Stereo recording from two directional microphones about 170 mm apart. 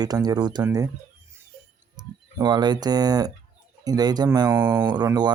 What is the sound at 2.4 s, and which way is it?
Speech, 25° right (ahead or behind).